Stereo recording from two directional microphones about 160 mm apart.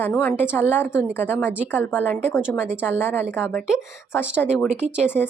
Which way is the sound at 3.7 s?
5° right (ahead or behind).